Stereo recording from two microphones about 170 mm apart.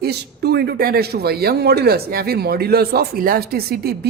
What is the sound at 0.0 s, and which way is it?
A man's voice, 70° right (ahead or behind).